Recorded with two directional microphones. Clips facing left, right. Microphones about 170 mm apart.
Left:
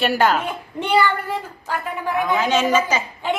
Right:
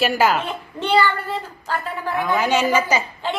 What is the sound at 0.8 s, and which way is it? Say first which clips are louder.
Speech: even; 15° left (ahead or behind).